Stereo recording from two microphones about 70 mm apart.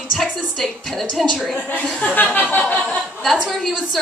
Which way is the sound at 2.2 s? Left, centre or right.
Left.